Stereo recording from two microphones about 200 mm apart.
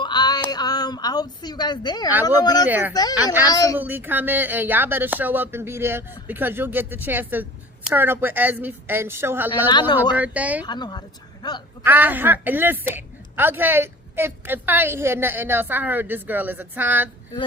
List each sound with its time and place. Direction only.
0.0 s a sound: 20° left (ahead or behind)
0.5 s a woman's voice: 20° left (ahead or behind)
2.6 s a woman's voice: 10° right (ahead or behind)
2.9 s a woman's voice: 20° left (ahead or behind)
3.8 s a woman's voice: 10° right (ahead or behind)
10.7 s speech: 20° left (ahead or behind)
11.8 s a woman's voice: 10° right (ahead or behind)